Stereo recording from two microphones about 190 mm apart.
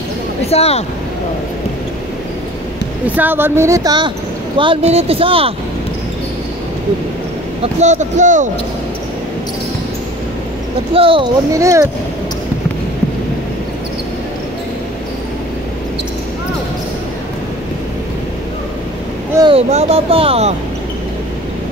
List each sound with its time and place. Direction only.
0.5 s speech: 35° left (ahead or behind)
3.2 s speech: 10° right (ahead or behind); by 5.5 s 30° right (ahead or behind)
7.6 s speech: 40° right (ahead or behind)
10.9 s speech: 30° right (ahead or behind)
11.5 s speech: 15° right (ahead or behind)
19.5 s speech: 30° right (ahead or behind)